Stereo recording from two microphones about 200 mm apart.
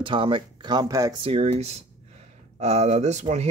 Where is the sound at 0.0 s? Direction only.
25° right (ahead or behind).